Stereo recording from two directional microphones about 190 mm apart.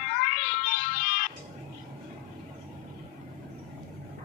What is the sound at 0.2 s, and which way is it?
Music, 40° left (ahead or behind).